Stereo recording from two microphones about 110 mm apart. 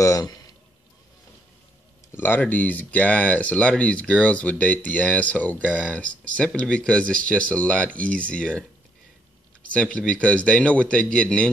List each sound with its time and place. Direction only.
0.0 s a sound: 35° left (ahead or behind)
2.1 s speech: 20° left (ahead or behind)
9.8 s speech: 10° left (ahead or behind)